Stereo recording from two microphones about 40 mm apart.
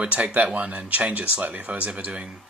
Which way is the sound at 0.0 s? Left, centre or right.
Right.